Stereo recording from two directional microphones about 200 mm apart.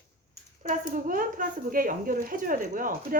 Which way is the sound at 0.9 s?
45° right (ahead or behind).